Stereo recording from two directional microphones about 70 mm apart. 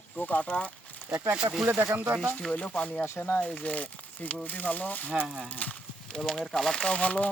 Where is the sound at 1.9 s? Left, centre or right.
Right.